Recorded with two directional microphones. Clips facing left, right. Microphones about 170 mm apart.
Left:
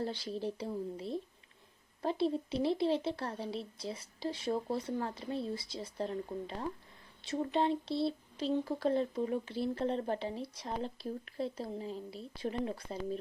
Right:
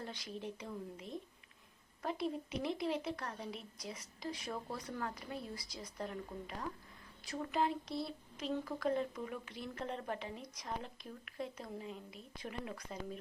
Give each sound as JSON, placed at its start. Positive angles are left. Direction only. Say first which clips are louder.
{"t": 0.0, "sound": "a woman's voice", "louder": "left 8 dB", "side_deg": 30}